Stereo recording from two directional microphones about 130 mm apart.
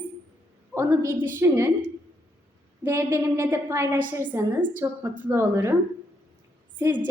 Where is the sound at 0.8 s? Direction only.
20° right (ahead or behind).